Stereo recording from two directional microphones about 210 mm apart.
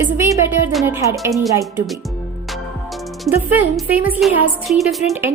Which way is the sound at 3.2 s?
10° right (ahead or behind).